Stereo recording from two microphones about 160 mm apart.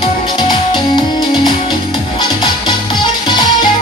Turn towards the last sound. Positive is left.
turn(degrees=25)  # may be behind; listen again after turning